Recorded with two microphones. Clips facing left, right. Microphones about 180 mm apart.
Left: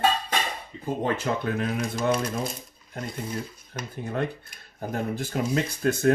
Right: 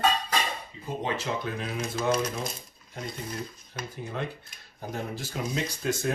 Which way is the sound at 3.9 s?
55° left (ahead or behind).